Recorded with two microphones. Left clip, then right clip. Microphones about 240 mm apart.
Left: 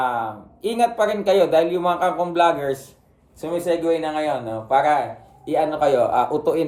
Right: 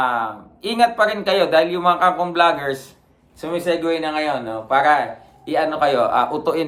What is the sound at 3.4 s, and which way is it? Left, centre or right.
Speech, right.